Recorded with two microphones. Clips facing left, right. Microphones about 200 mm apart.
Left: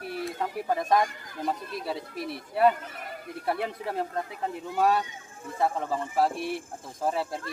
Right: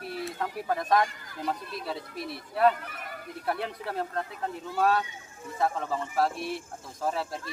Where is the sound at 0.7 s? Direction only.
10° left (ahead or behind).